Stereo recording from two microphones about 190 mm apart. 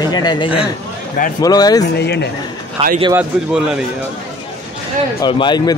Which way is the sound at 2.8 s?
35° right (ahead or behind).